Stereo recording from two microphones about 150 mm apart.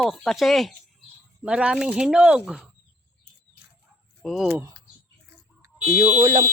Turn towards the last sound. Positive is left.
turn(degrees=-25)  # may be behind; listen again after turning